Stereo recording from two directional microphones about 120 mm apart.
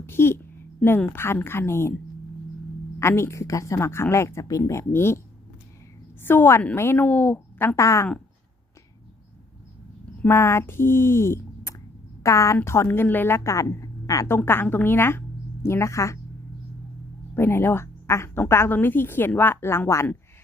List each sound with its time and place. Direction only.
0.0 s a woman's voice: 20° left (ahead or behind)
3.0 s a woman's voice: 20° left (ahead or behind)
6.2 s a woman's voice: 20° left (ahead or behind)
7.8 s a woman's voice: 25° left (ahead or behind)
10.2 s a woman's voice: 20° left (ahead or behind)
17.3 s a woman's voice: 20° left (ahead or behind)